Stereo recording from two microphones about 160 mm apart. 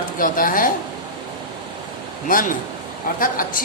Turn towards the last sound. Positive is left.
turn(degrees=60)  # may be behind; listen again after turning